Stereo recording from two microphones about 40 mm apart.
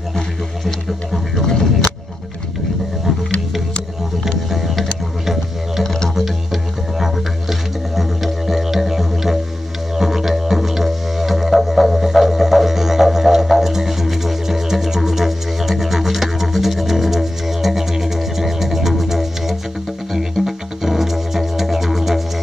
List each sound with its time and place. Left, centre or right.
0.7 s music: centre
1.4 s vehicle: centre
4.5 s music: centre
5.2 s didgeridoo: centre
6.0 s music: centre